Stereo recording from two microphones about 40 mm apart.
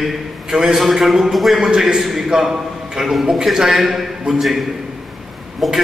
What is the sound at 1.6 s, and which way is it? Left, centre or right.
A man's voice, centre.